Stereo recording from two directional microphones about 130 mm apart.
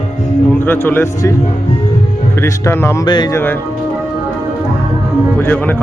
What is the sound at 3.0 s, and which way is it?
Speech, 35° left (ahead or behind).